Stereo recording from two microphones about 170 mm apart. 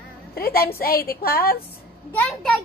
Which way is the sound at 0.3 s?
60° left (ahead or behind).